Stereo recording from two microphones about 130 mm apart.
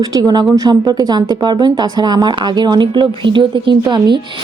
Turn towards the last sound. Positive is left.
turn(degrees=-35)  # may be behind; listen again after turning